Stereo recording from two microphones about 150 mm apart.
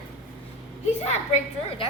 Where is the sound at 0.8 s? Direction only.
50° left (ahead or behind).